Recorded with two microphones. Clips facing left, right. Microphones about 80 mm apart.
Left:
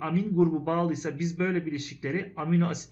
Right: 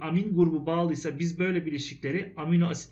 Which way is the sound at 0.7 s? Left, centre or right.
Centre.